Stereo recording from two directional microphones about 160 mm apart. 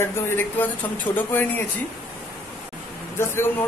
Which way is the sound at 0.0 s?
15° left (ahead or behind).